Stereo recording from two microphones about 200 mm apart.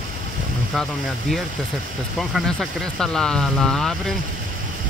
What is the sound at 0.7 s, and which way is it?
Speech, centre (ahead or behind).